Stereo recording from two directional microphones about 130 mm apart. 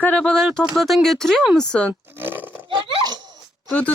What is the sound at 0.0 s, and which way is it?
Speech, 10° left (ahead or behind).